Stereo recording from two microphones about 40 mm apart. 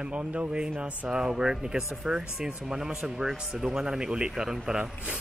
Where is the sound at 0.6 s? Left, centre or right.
Right.